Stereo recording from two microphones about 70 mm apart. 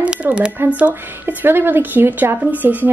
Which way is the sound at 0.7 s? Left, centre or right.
Right.